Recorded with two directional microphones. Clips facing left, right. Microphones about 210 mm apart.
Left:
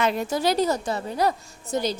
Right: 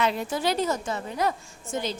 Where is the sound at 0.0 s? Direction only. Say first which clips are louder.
Left 3 dB; 50° left (ahead or behind).